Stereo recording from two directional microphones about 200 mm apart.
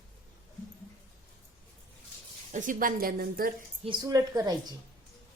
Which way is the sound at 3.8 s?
20° right (ahead or behind).